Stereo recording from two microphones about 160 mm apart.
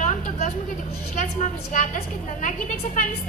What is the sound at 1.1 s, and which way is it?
A woman's voice, 50° left (ahead or behind).